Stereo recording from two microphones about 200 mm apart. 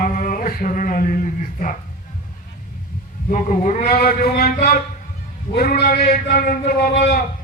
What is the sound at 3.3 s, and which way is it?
A man's voice, 40° left (ahead or behind).